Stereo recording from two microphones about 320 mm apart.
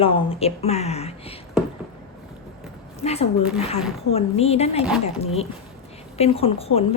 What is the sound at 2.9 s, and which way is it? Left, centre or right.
A woman's voice, centre.